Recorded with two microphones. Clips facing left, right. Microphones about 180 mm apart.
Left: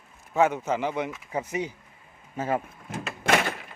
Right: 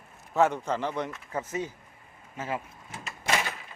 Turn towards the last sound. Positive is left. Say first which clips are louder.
# left 6 dB
turn(degrees=65)  # may be behind; listen again after turning